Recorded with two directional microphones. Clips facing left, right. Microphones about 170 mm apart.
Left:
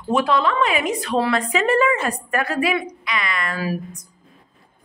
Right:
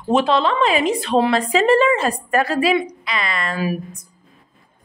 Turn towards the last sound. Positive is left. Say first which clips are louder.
# right 1 dB
turn(degrees=-30)  # may be behind; listen again after turning